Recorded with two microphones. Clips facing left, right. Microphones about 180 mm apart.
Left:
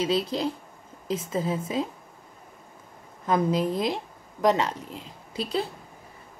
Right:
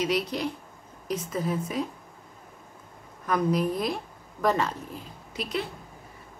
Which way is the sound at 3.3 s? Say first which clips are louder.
Left 1 dB; 25° left (ahead or behind).